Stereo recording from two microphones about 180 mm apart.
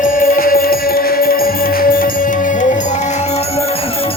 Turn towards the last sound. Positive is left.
turn(degrees=50)  # may be behind; listen again after turning